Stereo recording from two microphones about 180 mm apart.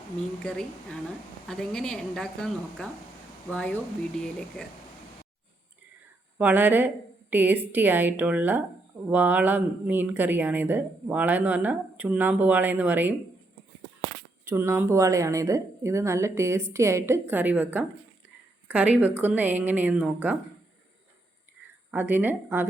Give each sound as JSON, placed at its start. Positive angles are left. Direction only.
{"t": 0.4, "sound": "a woman's voice", "side_deg": 5}
{"t": 6.4, "sound": "speech", "side_deg": -10}
{"t": 14.4, "sound": "speech", "side_deg": -15}
{"t": 21.9, "sound": "speech", "side_deg": -10}